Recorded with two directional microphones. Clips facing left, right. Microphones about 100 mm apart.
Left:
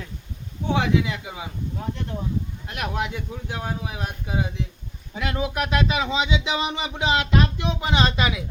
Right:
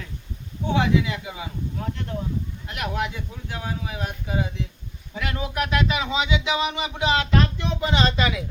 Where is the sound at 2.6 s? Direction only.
20° left (ahead or behind).